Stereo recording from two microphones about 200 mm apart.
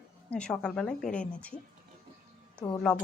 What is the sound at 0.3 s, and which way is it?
Speech, 5° left (ahead or behind).